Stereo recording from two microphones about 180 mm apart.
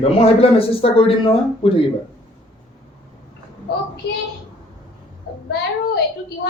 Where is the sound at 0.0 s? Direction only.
35° left (ahead or behind).